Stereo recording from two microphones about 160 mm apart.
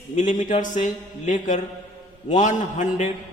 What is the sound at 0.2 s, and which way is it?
A man's voice, 50° left (ahead or behind).